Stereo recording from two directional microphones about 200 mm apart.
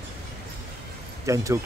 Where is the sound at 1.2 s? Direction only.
15° right (ahead or behind).